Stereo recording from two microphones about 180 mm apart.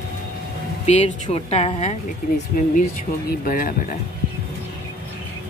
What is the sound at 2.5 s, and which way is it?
Speech, 50° left (ahead or behind).